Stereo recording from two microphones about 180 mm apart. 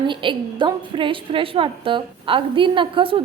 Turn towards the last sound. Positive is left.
turn(degrees=-30)  # may be behind; listen again after turning